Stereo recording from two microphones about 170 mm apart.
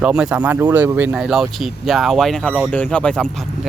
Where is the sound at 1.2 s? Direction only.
Centre (ahead or behind).